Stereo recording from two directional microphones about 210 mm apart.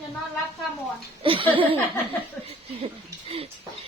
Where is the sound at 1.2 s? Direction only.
25° right (ahead or behind).